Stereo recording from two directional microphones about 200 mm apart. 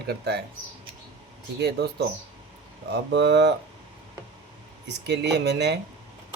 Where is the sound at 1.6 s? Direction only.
55° right (ahead or behind).